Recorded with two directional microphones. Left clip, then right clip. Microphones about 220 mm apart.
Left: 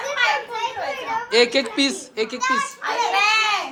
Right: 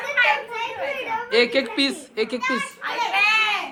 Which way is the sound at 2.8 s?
50° left (ahead or behind).